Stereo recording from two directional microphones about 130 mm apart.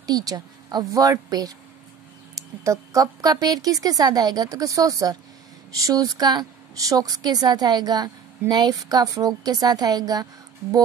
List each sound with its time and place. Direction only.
0.0 s a woman's voice: 30° right (ahead or behind)